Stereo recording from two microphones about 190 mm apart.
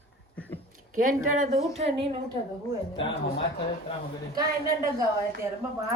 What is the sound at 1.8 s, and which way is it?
Speech, 30° right (ahead or behind).